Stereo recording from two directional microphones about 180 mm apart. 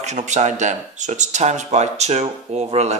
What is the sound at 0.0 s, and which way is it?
Speech, 40° right (ahead or behind).